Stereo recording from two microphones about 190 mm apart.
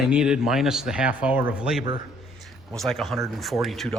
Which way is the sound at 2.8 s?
Centre (ahead or behind).